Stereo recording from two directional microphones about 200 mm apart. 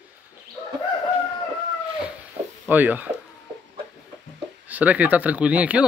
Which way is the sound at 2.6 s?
10° right (ahead or behind).